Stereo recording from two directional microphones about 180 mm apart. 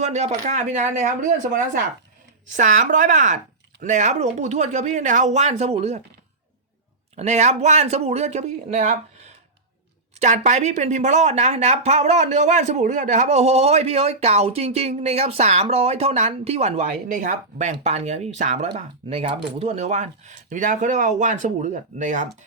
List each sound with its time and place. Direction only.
0.0 s speech: 40° right (ahead or behind)
7.2 s speech: 40° right (ahead or behind)